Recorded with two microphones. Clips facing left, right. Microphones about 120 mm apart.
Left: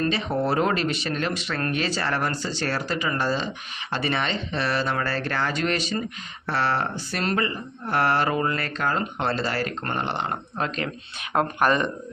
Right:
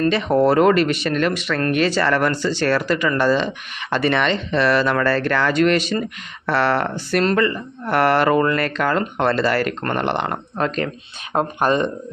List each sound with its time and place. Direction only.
0.1 s speech: 65° right (ahead or behind)
11.3 s speech: 25° right (ahead or behind)